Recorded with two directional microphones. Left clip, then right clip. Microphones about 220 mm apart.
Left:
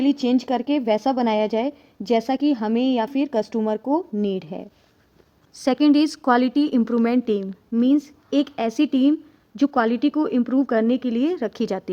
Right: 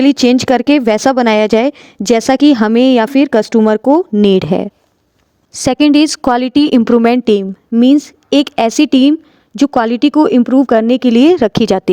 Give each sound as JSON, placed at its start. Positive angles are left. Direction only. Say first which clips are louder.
{"t": 0.0, "sound": "speech", "louder": "right 11 dB", "side_deg": -50}